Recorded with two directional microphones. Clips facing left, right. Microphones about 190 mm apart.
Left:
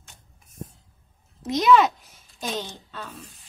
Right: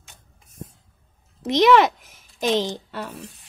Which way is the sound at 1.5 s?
80° right.